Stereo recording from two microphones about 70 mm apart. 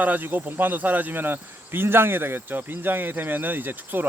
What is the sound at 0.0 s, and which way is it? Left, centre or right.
Speech, right.